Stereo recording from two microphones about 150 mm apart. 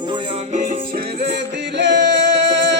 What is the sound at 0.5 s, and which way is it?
Music, 60° right (ahead or behind).